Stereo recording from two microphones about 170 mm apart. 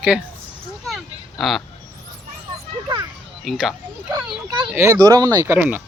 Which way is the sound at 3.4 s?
Centre (ahead or behind).